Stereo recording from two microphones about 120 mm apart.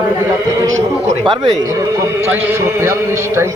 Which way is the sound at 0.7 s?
75° right (ahead or behind).